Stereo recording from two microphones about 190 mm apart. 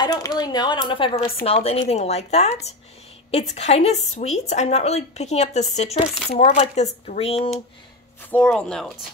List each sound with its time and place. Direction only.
0.0 s a woman's voice: 20° left (ahead or behind)
8.2 s speech: 10° left (ahead or behind)